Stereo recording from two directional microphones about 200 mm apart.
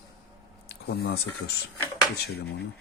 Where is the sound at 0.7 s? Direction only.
50° left (ahead or behind).